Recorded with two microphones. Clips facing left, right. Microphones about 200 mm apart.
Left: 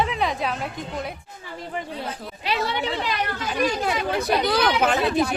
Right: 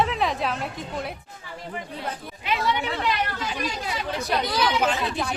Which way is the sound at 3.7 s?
60° left (ahead or behind).